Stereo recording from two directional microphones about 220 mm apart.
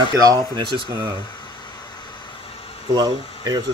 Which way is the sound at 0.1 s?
15° right (ahead or behind).